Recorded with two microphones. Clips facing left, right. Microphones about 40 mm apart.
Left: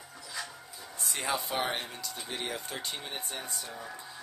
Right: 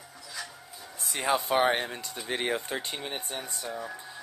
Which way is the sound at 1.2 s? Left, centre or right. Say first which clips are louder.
Right 8 dB; right.